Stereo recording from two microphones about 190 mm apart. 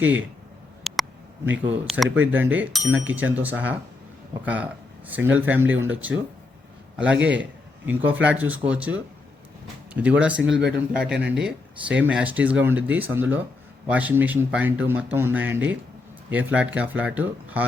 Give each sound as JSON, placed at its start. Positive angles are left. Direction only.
{"t": 0.9, "sound": "a sound", "side_deg": 0}
{"t": 1.6, "sound": "speech", "side_deg": -10}
{"t": 2.0, "sound": "speech", "side_deg": -90}
{"t": 2.3, "sound": "speech", "side_deg": -10}